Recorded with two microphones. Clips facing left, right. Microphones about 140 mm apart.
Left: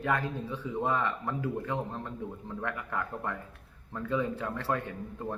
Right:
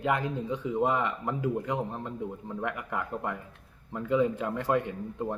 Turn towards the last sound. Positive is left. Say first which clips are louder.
# right 4 dB
turn(degrees=-20)  # may be behind; listen again after turning